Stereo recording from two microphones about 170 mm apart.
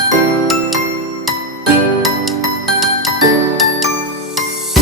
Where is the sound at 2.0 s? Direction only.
Centre (ahead or behind).